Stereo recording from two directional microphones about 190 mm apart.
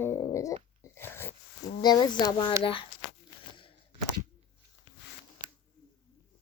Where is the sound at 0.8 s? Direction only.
10° left (ahead or behind).